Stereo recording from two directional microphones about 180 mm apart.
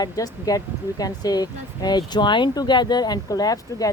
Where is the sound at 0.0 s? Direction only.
20° left (ahead or behind).